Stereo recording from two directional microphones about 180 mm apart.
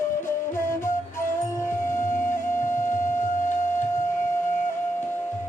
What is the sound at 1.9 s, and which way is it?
Music, 50° left (ahead or behind).